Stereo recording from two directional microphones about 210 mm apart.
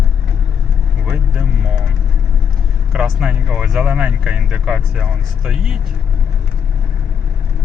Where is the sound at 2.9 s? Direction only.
Centre (ahead or behind).